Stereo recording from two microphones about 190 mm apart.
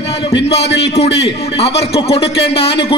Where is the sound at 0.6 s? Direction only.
65° left (ahead or behind).